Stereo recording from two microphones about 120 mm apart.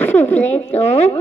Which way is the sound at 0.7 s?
65° left (ahead or behind).